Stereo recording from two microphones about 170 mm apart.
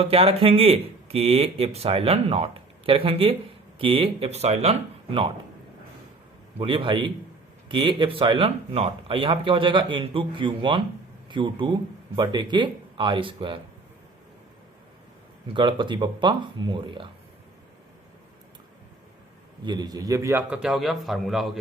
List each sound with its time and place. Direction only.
0.0 s speech: 35° right (ahead or behind)
6.6 s speech: 30° right (ahead or behind)
15.5 s speech: 30° right (ahead or behind)
19.6 s a man's voice: 25° right (ahead or behind); by 21.6 s centre (ahead or behind)